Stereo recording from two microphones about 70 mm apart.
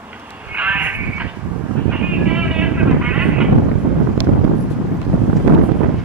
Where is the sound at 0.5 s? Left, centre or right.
Right.